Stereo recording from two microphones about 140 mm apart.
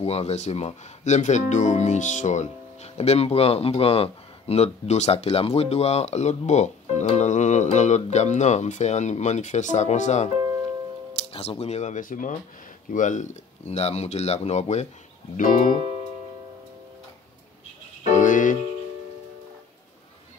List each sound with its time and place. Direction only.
0.0 s speech: 50° left (ahead or behind)
11.3 s speech: 45° left (ahead or behind)
15.3 s music: 75° left (ahead or behind)
18.0 s music: 60° left (ahead or behind)